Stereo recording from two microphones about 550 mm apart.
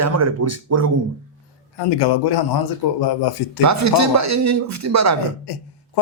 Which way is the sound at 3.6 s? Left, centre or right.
Right.